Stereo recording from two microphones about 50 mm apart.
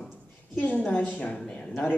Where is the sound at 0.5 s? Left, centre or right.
Left.